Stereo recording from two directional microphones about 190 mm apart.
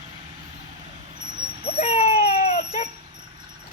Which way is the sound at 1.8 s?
35° left (ahead or behind).